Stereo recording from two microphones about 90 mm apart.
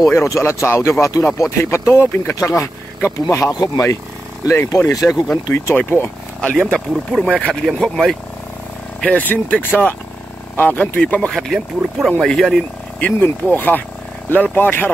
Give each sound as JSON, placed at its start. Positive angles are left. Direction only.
{"t": 0.1, "sound": "speech", "side_deg": 30}
{"t": 1.1, "sound": "speech", "side_deg": 45}
{"t": 1.6, "sound": "speech", "side_deg": 30}
{"t": 3.5, "sound": "speech", "side_deg": 45}
{"t": 4.8, "sound": "speech", "side_deg": 40}
{"t": 5.5, "sound": "speech", "side_deg": 25}
{"t": 6.4, "sound": "speech", "side_deg": 5}
{"t": 9.0, "sound": "speech", "side_deg": 20}
{"t": 11.0, "sound": "speech", "side_deg": 10}
{"t": 13.0, "sound": "speech", "side_deg": 20}